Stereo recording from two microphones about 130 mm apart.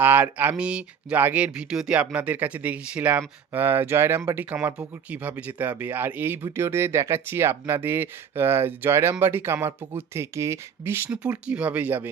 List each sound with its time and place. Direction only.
0.0 s speech: 15° right (ahead or behind)